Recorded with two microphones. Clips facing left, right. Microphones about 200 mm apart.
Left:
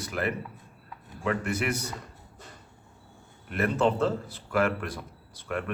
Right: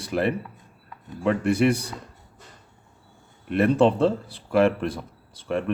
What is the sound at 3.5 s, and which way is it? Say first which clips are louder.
Speech: right 7 dB; 30° right (ahead or behind).